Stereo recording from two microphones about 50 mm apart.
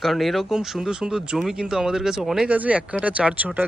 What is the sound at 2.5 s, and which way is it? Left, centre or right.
Speech, right.